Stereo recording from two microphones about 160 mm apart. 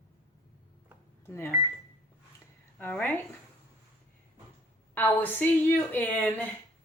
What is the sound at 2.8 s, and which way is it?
Speech, 10° left (ahead or behind).